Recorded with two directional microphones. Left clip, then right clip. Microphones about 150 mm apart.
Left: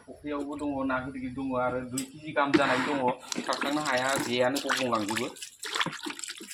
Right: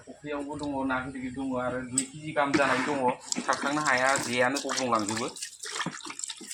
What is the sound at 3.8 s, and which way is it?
Speech, 20° right (ahead or behind).